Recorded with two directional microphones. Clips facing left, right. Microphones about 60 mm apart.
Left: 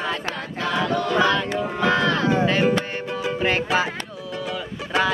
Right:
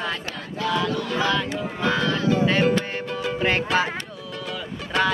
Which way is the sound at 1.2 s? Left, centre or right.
Centre.